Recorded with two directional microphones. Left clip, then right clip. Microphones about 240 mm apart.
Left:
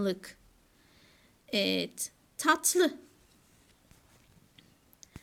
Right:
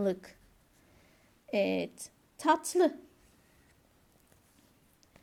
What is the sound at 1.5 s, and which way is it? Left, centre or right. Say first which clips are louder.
A woman's voice: even; left.